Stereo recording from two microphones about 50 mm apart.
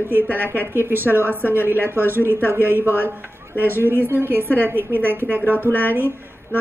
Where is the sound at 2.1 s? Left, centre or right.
Right.